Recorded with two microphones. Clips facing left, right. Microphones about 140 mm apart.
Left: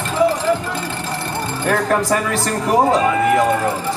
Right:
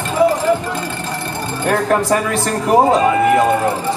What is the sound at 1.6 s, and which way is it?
Speech, 10° right (ahead or behind).